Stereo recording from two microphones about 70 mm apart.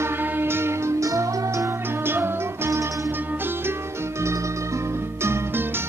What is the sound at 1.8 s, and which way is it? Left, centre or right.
Music, right.